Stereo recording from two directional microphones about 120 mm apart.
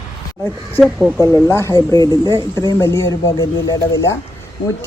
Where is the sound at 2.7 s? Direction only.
25° left (ahead or behind).